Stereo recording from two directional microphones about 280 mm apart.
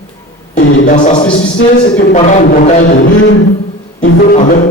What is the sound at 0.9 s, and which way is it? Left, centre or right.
Speech, left.